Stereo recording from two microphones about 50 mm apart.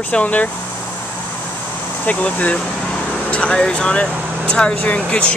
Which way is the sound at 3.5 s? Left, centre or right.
Centre.